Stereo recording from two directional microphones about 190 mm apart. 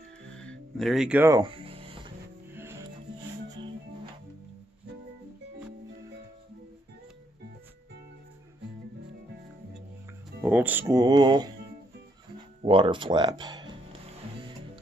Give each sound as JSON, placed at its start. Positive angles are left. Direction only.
{"t": 0.3, "sound": "music", "side_deg": 5}
{"t": 1.3, "sound": "music", "side_deg": -25}
{"t": 2.5, "sound": "music", "side_deg": -10}
{"t": 10.4, "sound": "speech", "side_deg": -10}
{"t": 12.6, "sound": "speech", "side_deg": -25}